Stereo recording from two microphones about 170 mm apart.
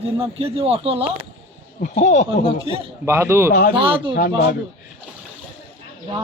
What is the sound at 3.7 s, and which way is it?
Speech, 30° right (ahead or behind).